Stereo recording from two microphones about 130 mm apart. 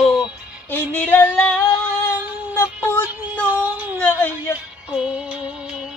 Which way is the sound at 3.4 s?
15° right (ahead or behind).